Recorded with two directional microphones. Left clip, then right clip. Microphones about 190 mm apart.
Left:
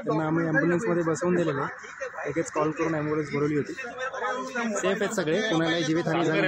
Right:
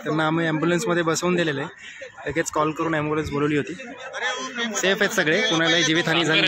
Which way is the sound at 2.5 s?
15° right (ahead or behind).